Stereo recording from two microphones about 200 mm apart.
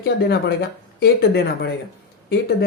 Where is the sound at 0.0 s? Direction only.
55° left (ahead or behind).